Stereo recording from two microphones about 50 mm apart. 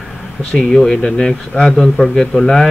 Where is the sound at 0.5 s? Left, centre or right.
Centre.